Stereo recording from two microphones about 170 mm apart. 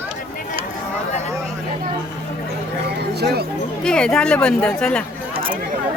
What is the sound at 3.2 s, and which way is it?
Speech, 70° right (ahead or behind).